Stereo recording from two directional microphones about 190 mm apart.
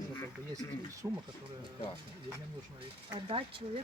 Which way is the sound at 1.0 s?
10° right (ahead or behind).